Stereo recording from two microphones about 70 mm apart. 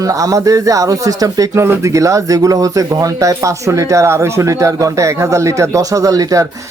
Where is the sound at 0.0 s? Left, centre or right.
Right.